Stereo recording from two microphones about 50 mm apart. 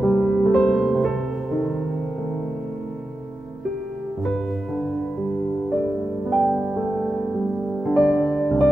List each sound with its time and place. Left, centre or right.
0.0 s music: centre
6.3 s music: centre